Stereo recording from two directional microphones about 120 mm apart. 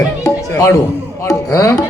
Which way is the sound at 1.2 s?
25° left (ahead or behind).